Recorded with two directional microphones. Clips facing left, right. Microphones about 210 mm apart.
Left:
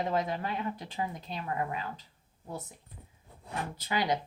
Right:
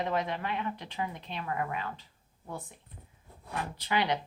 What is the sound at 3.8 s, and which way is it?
Speech, 45° left (ahead or behind).